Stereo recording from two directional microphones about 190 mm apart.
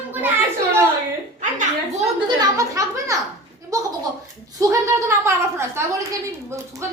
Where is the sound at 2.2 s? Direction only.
20° right (ahead or behind).